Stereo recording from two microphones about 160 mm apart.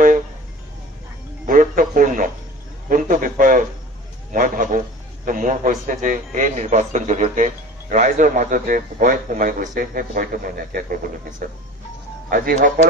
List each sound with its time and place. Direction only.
1.4 s music: 55° right (ahead or behind)
2.9 s a man's voice: 55° right (ahead or behind)